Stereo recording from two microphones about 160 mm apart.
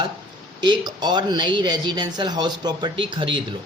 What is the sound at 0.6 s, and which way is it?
Speech, 25° right (ahead or behind).